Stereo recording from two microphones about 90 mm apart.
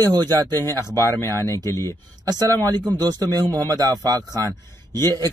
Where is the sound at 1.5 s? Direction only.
35° left (ahead or behind).